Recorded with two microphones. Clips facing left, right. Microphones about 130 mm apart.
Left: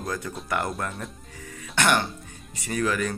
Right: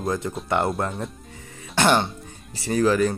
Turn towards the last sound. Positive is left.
turn(degrees=-30)  # may be behind; listen again after turning